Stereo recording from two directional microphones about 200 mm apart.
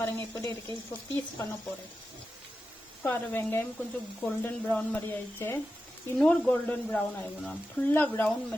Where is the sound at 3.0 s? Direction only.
10° left (ahead or behind).